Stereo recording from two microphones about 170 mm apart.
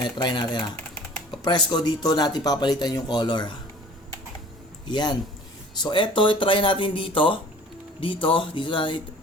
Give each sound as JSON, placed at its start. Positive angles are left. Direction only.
{"t": 0.0, "sound": "speech", "side_deg": 25}
{"t": 4.9, "sound": "speech", "side_deg": 25}